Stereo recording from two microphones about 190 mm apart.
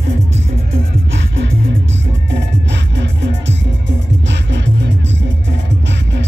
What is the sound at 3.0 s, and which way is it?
Music, 70° right (ahead or behind).